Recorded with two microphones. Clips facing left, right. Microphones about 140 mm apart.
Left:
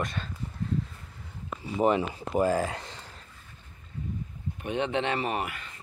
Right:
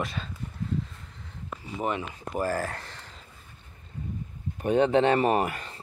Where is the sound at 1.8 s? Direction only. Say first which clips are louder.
Left 6 dB; 30° left (ahead or behind).